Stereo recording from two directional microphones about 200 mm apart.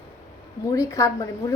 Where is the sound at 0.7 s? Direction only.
15° left (ahead or behind).